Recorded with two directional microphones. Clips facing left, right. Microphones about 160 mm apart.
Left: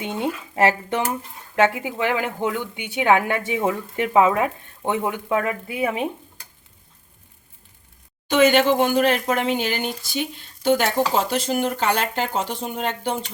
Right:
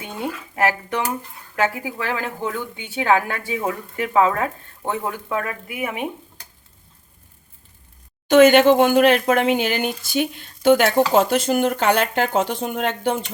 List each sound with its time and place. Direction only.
0.0 s a sound: 25° left (ahead or behind)
1.5 s a woman's voice: 25° left (ahead or behind)
8.3 s speech: 50° right (ahead or behind)